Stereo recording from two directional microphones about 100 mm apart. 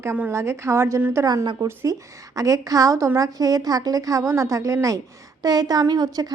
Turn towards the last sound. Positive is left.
turn(degrees=-40)  # may be behind; listen again after turning